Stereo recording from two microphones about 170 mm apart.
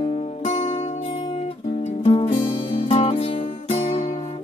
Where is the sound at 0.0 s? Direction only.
35° left (ahead or behind).